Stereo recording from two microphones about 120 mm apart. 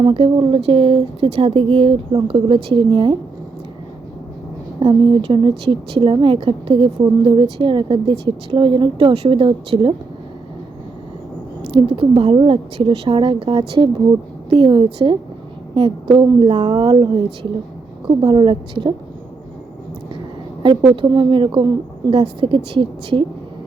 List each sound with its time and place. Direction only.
0.0 s a woman's voice: 45° right (ahead or behind)
4.8 s a woman's voice: 45° right (ahead or behind)
11.7 s a woman's voice: 50° right (ahead or behind)
18.3 s a woman's voice: 45° right (ahead or behind)
20.6 s a woman's voice: 45° right (ahead or behind)